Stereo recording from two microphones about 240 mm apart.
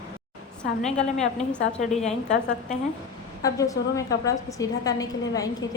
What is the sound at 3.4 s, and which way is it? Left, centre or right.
A woman's voice, centre.